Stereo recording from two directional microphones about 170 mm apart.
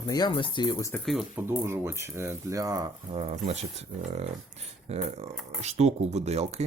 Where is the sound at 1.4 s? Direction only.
15° right (ahead or behind).